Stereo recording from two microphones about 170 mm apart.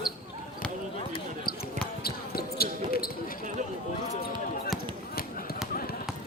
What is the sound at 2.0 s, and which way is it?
Basketball bounce, 65° left (ahead or behind).